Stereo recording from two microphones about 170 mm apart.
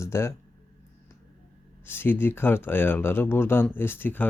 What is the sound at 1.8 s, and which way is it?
Speech, 10° left (ahead or behind).